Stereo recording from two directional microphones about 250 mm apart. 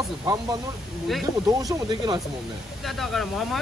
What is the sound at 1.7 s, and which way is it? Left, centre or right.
Speech, centre.